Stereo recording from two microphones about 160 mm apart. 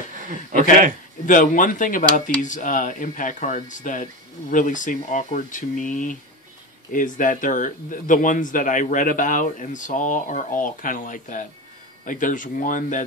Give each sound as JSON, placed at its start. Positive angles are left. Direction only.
{"t": 0.2, "sound": "speech", "side_deg": -55}
{"t": 1.2, "sound": "speech", "side_deg": 55}